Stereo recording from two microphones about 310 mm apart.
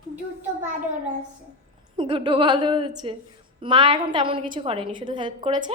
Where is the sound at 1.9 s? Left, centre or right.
Centre.